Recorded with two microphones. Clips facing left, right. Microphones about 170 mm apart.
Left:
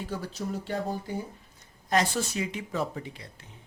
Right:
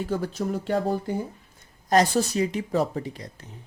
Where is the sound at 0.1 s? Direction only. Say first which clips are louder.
Right 6 dB; 50° right (ahead or behind).